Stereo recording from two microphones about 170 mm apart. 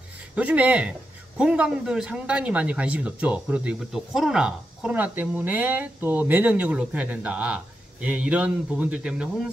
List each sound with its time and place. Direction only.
0.4 s speech: 10° right (ahead or behind)